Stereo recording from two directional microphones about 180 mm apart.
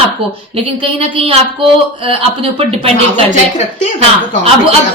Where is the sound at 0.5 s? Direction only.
30° right (ahead or behind).